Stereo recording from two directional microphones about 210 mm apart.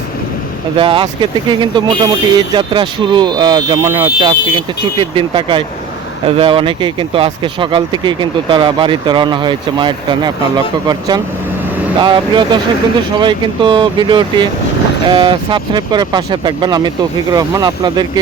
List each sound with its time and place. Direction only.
0.8 s speech: 25° right (ahead or behind)